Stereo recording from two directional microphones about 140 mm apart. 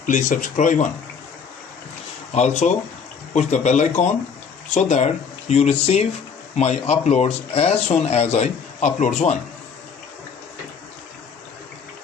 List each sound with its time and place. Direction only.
0.0 s speech: 65° left (ahead or behind)
2.3 s speech: 55° left (ahead or behind)